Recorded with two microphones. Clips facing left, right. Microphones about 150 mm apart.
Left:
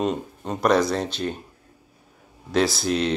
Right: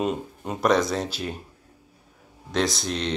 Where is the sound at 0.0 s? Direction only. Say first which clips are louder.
Left 1 dB; 10° right (ahead or behind).